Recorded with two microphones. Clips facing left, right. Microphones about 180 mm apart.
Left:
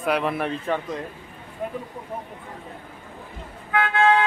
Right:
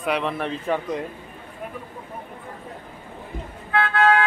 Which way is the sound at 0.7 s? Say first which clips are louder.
Right 2 dB; 5° right (ahead or behind).